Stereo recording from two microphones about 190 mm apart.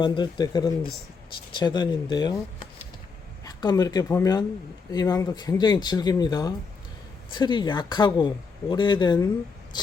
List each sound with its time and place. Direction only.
0.0 s speech: 25° left (ahead or behind)
3.4 s speech: 20° left (ahead or behind)